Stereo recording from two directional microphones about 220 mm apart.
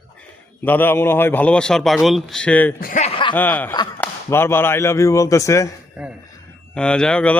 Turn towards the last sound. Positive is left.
turn(degrees=5)  # may be behind; listen again after turning